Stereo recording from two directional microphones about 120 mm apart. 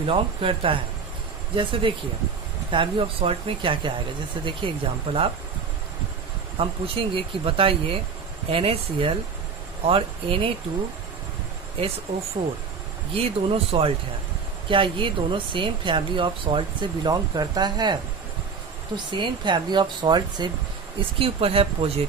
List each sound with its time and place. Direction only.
0.0 s speech: 50° right (ahead or behind)
6.6 s speech: 50° right (ahead or behind)
13.1 s speech: 50° right (ahead or behind)
18.9 s speech: 40° right (ahead or behind)
21.2 s speech: 55° right (ahead or behind)